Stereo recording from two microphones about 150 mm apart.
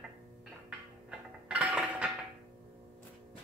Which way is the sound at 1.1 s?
5° right (ahead or behind).